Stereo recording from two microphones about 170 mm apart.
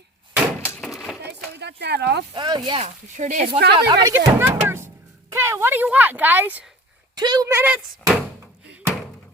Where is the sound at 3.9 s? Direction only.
25° right (ahead or behind).